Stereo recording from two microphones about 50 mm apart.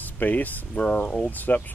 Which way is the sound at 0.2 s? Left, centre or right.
Left.